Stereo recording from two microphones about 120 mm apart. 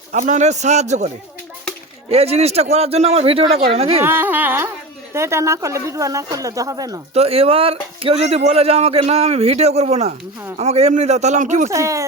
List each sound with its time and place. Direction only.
0.1 s a man's voice: 85° right
2.0 s speech: 60° right (ahead or behind)
4.0 s speech: 15° right (ahead or behind)
7.1 s a man's voice: 55° right (ahead or behind); by 11.7 s 80° right
11.7 s speech: 25° right (ahead or behind)